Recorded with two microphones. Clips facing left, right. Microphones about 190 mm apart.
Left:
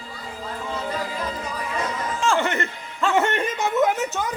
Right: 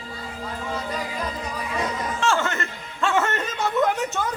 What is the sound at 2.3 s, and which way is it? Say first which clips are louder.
Chuckle: left 3 dB; 15° left (ahead or behind).